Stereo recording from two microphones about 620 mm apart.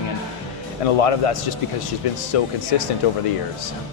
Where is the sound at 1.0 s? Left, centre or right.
Left.